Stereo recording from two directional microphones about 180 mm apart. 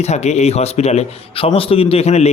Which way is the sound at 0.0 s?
40° left (ahead or behind).